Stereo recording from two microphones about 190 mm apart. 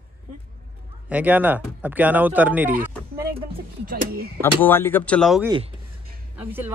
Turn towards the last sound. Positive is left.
turn(degrees=-10)  # may be behind; listen again after turning